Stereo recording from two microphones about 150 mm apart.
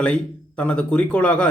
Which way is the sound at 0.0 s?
10° left (ahead or behind).